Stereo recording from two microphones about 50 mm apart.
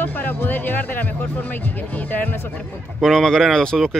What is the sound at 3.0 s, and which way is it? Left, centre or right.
Speech, centre.